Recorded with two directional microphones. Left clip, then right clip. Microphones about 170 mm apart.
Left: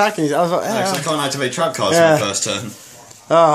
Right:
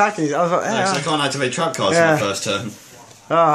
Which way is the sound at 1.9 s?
15° left (ahead or behind).